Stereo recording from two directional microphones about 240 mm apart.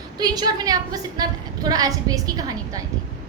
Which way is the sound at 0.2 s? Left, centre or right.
Centre.